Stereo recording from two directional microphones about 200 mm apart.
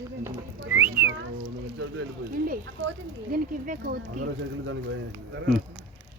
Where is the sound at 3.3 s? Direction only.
45° right (ahead or behind).